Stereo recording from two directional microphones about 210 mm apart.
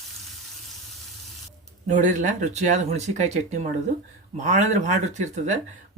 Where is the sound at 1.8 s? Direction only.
35° right (ahead or behind).